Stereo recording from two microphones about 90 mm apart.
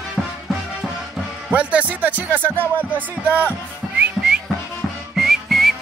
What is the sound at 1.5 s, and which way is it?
Speech, 15° right (ahead or behind).